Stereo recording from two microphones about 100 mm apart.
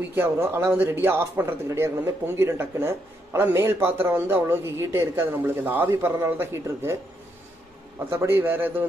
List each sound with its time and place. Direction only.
0.1 s a man's voice: 25° right (ahead or behind)
8.0 s a man's voice: 25° right (ahead or behind)